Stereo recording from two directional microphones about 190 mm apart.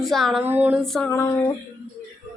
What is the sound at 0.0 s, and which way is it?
Female singing, centre (ahead or behind).